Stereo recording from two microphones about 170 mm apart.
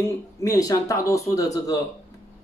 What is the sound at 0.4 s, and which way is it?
Speech, 20° left (ahead or behind).